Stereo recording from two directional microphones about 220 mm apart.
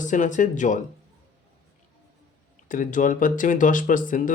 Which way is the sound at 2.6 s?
35° left (ahead or behind).